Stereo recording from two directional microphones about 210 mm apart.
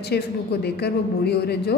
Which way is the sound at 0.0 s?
50° left (ahead or behind).